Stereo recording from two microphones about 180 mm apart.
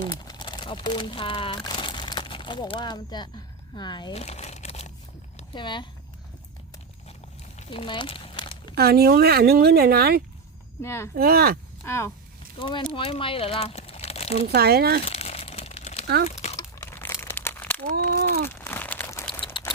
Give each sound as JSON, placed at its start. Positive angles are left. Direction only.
{"t": 0.1, "sound": "crumpling", "side_deg": 25}
{"t": 5.4, "sound": "speech", "side_deg": 25}
{"t": 7.6, "sound": "a sound", "side_deg": 30}
{"t": 8.7, "sound": "speech", "side_deg": -60}
{"t": 10.8, "sound": "speech", "side_deg": 15}
{"t": 11.1, "sound": "speech", "side_deg": -60}
{"t": 11.9, "sound": "speech", "side_deg": 15}
{"t": 12.5, "sound": "speech", "side_deg": 25}
{"t": 14.4, "sound": "speech", "side_deg": -60}
{"t": 15.0, "sound": "crumpling", "side_deg": 35}
{"t": 16.2, "sound": "a sound", "side_deg": 35}
{"t": 16.6, "sound": "crumpling", "side_deg": 15}
{"t": 17.9, "sound": "a sound", "side_deg": -60}
{"t": 18.4, "sound": "crumpling", "side_deg": 15}